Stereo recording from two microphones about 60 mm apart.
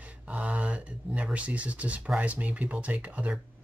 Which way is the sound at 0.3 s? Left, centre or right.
Right.